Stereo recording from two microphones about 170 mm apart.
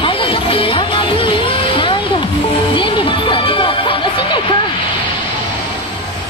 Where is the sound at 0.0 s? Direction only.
30° left (ahead or behind).